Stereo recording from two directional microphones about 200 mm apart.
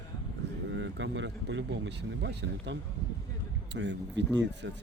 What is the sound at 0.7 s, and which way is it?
Speech, 65° right (ahead or behind).